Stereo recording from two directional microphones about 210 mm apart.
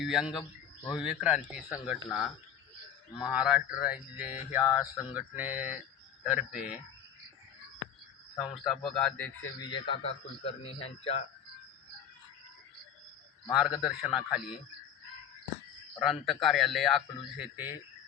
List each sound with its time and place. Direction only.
0.0 s a man's voice: centre (ahead or behind)
8.5 s a man's voice: centre (ahead or behind); by 11.3 s 30° left (ahead or behind)
13.5 s a man's voice: centre (ahead or behind)
16.0 s a man's voice: centre (ahead or behind)